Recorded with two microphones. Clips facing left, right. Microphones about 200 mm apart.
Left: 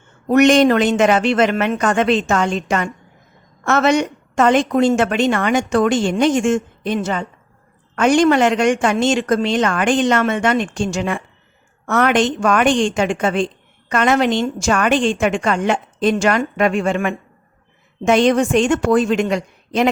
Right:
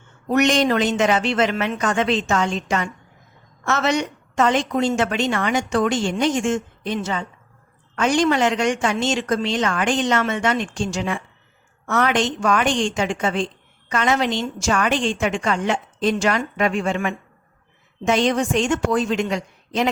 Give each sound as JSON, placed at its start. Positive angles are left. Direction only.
{"t": 0.3, "sound": "a woman's voice", "side_deg": 55}